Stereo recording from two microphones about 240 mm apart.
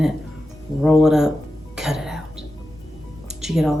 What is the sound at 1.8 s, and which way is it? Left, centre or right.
Cough, centre.